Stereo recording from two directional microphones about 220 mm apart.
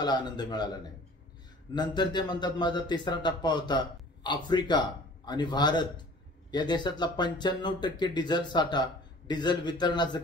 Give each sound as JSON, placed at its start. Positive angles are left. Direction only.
{"t": 0.0, "sound": "a man's voice", "side_deg": 20}
{"t": 1.8, "sound": "a man's voice", "side_deg": 20}